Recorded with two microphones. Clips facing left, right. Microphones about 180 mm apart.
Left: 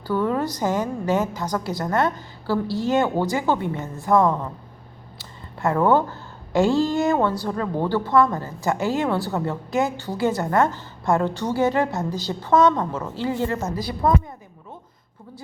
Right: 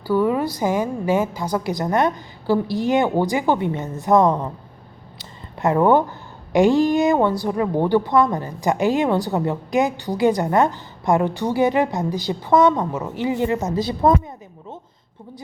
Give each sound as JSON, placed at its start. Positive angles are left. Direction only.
{"t": 0.1, "sound": "speech", "side_deg": -10}